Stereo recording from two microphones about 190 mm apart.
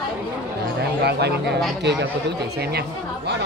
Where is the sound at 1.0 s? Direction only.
60° right (ahead or behind).